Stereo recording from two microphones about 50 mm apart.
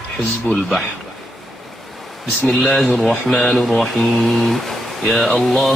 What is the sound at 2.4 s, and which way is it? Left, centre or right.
Speech, centre.